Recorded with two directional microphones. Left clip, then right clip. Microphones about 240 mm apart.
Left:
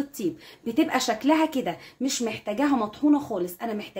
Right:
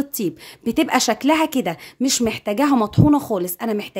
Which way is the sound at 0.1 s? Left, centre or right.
Right.